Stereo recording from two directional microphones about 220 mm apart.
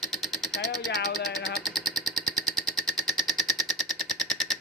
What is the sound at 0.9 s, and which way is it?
Speech, 45° left (ahead or behind).